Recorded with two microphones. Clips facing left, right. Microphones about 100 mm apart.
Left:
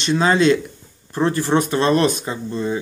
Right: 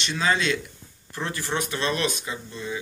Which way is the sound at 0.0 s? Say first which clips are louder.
Left 9 dB; 40° left (ahead or behind).